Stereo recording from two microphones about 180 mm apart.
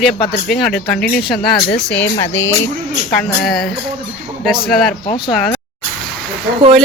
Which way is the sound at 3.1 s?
Centre (ahead or behind).